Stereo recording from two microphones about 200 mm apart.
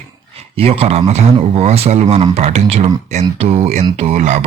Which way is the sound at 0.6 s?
30° right (ahead or behind).